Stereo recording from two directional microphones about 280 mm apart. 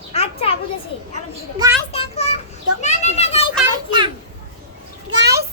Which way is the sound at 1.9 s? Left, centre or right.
Left.